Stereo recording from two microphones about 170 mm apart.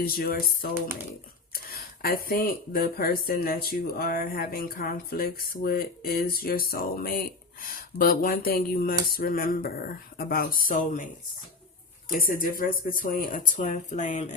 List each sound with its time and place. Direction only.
0.0 s speech: 60° left (ahead or behind); by 14.3 s 45° left (ahead or behind)